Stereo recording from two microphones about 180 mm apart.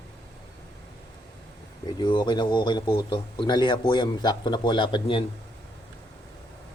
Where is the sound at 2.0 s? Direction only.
25° left (ahead or behind).